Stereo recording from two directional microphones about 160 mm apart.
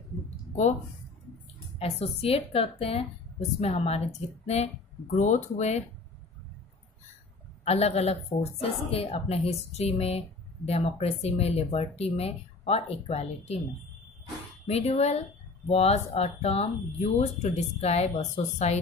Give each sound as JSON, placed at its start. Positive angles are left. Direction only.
{"t": 1.8, "sound": "a woman's voice", "side_deg": 40}
{"t": 5.1, "sound": "speech", "side_deg": 50}
{"t": 7.6, "sound": "a woman's voice", "side_deg": 40}
{"t": 14.7, "sound": "a woman's voice", "side_deg": 40}